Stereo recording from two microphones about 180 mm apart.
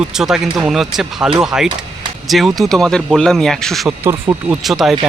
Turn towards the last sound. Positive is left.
turn(degrees=0)  # may be behind; listen again after turning